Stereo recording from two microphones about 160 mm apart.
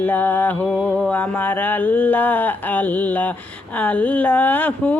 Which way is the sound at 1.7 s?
10° left (ahead or behind).